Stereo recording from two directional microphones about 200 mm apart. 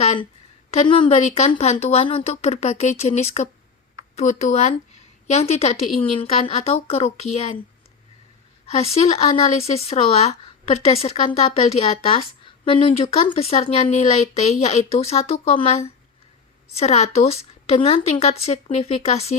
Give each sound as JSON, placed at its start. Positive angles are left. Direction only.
{"t": 0.7, "sound": "a woman's voice", "side_deg": 25}
{"t": 8.8, "sound": "a woman's voice", "side_deg": 30}